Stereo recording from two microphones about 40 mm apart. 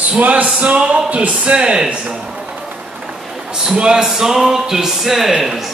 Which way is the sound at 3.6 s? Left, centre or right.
Centre.